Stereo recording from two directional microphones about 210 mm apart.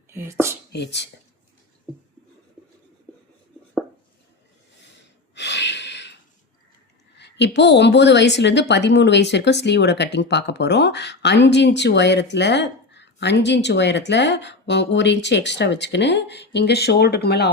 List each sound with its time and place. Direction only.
0.1 s speech: 10° right (ahead or behind)
0.7 s a woman's voice: 55° left (ahead or behind)
5.3 s a sound: 55° left (ahead or behind)
7.2 s a woman's voice: 55° left (ahead or behind)